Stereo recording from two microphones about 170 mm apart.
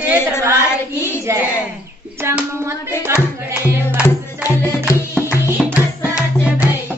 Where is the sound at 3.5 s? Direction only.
10° right (ahead or behind).